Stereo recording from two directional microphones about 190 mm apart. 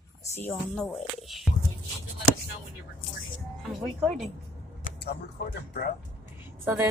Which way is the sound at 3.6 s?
Centre (ahead or behind).